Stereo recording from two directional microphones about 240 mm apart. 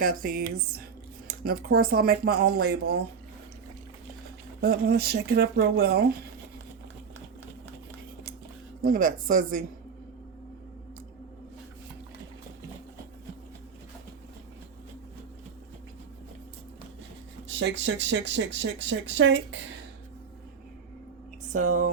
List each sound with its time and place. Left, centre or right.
0.0 s speech: right
4.6 s speech: right
8.8 s speech: right
17.6 s speech: right
21.5 s speech: right